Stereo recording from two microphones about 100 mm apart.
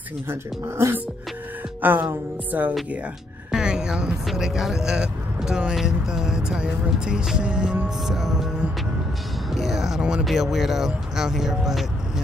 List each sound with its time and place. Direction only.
0.3 s music: 25° right (ahead or behind)
3.5 s speech: 10° right (ahead or behind)